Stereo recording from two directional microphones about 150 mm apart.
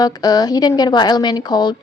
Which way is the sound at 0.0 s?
25° left (ahead or behind).